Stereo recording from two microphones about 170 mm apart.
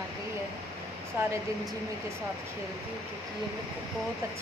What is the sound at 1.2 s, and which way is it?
Speech, 15° right (ahead or behind).